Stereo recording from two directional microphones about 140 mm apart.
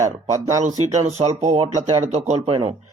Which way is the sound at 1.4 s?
50° right (ahead or behind).